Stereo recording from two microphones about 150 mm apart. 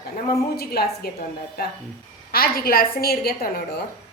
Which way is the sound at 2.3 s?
85° left.